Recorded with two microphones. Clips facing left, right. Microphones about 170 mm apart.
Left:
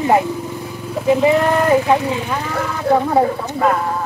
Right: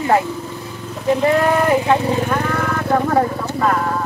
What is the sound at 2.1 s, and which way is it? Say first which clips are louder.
Speech: right 3 dB; 50° right (ahead or behind).